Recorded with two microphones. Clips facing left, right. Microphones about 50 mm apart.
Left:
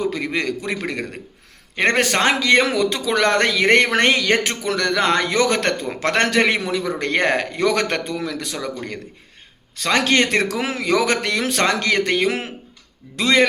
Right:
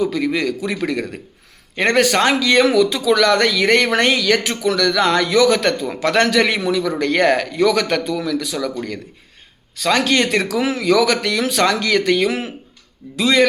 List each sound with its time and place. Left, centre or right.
0.0 s speech: left
9.7 s speech: left